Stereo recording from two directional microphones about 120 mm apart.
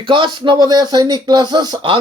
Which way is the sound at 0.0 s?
45° right (ahead or behind).